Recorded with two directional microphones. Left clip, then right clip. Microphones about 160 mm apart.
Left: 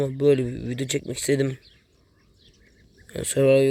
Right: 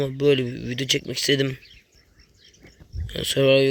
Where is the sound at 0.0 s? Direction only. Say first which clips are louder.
Even; 10° left (ahead or behind).